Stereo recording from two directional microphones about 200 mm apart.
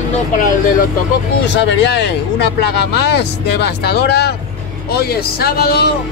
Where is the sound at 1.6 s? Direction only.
60° left (ahead or behind).